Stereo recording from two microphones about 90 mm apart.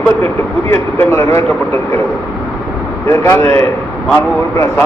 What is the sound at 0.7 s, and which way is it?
Speech, 30° left (ahead or behind).